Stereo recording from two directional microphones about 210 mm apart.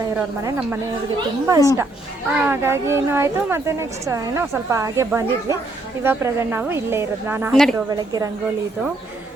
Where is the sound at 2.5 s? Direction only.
10° right (ahead or behind).